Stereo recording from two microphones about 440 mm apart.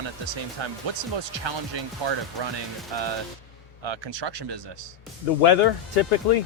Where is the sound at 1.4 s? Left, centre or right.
Right.